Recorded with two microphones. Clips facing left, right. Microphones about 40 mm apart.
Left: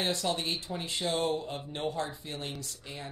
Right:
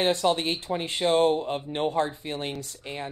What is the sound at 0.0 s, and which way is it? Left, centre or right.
Speech, right.